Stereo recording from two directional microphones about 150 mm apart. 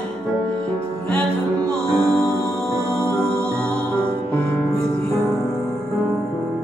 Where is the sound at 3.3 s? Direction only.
15° right (ahead or behind).